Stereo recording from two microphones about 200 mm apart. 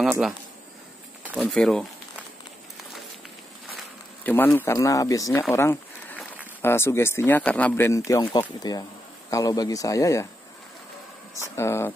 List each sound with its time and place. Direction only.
0.0 s speech: 5° right (ahead or behind)
3.7 s speech: 10° left (ahead or behind)
11.5 s speech: 15° left (ahead or behind)